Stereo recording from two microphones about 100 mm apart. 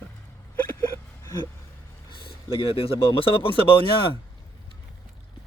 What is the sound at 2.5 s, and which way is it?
Speech, 65° left (ahead or behind).